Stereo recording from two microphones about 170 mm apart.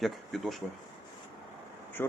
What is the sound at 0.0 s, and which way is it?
Speech, centre (ahead or behind).